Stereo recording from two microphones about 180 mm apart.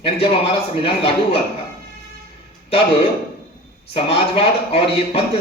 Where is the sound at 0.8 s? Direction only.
30° left (ahead or behind).